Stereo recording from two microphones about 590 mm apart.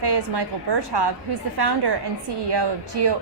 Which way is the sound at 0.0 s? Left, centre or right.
Right.